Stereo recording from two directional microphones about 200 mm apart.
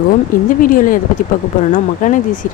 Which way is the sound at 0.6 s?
45° left (ahead or behind).